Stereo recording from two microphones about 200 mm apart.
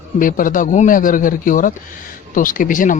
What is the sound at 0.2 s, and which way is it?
A man's voice, 45° left (ahead or behind).